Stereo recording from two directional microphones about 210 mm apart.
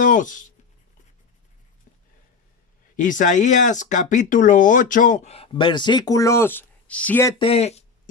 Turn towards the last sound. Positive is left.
turn(degrees=30)  # may be behind; listen again after turning